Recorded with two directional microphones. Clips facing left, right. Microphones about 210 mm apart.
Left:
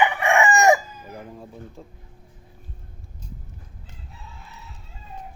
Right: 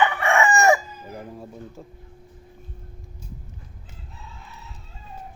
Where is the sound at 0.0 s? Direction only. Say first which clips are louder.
Left 1 dB; 15° left (ahead or behind).